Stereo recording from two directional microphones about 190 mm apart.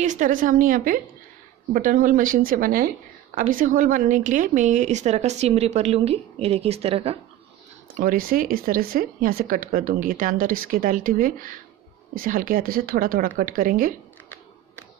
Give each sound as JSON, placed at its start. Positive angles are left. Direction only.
{"t": 0.0, "sound": "a woman's voice", "side_deg": -40}
{"t": 7.9, "sound": "speech", "side_deg": -45}